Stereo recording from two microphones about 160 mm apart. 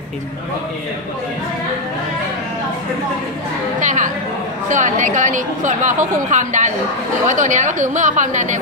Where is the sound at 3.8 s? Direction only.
50° right (ahead or behind).